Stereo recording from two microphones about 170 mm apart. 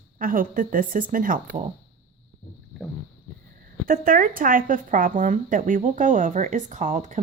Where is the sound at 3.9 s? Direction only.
55° right (ahead or behind).